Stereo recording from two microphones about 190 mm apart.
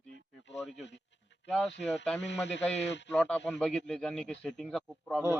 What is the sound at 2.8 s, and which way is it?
Speech, 70° left (ahead or behind).